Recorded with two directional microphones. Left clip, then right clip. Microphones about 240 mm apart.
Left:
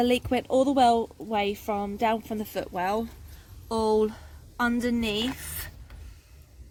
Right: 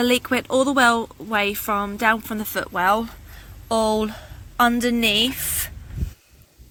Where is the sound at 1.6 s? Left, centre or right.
Right.